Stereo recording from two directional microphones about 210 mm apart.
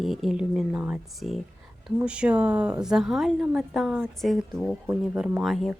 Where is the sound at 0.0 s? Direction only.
Centre (ahead or behind).